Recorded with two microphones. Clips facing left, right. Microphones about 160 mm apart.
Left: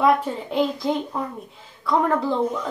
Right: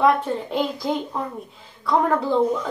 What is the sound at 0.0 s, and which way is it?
Speech, centre (ahead or behind).